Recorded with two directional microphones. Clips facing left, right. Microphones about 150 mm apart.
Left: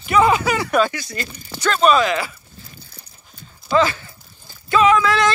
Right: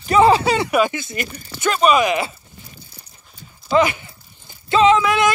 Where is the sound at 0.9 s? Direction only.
20° right (ahead or behind).